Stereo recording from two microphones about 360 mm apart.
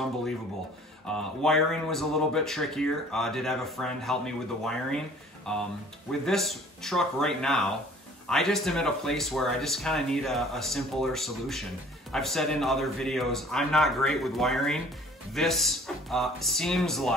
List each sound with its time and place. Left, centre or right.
1.0 s speech: centre